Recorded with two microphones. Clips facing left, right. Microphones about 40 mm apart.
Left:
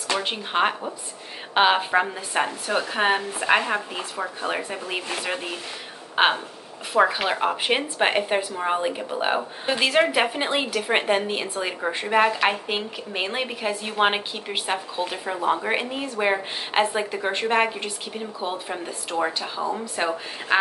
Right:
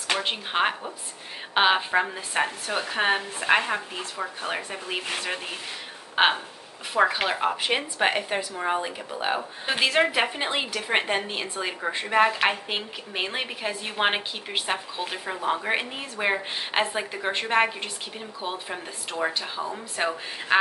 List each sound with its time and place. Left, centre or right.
0.2 s a woman's voice: centre
6.2 s a woman's voice: centre; by 9.4 s left
9.7 s a woman's voice: centre